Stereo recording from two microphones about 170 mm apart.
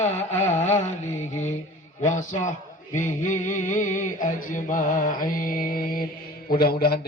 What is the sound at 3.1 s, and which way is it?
Mantra, 45° left (ahead or behind).